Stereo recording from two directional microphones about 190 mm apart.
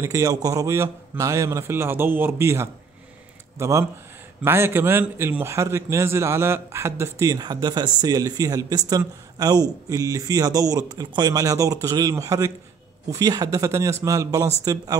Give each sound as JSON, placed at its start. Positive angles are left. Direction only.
{"t": 0.0, "sound": "a man's voice", "side_deg": -15}